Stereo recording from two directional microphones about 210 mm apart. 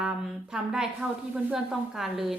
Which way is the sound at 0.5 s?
5° right (ahead or behind).